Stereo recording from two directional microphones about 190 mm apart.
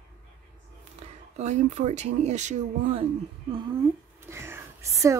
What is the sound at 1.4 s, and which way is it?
Speech, 35° right (ahead or behind).